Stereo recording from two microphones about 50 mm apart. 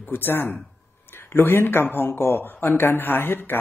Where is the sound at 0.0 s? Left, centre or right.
Left.